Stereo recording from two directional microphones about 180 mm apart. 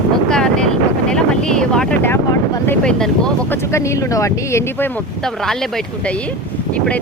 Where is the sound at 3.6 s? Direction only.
15° left (ahead or behind).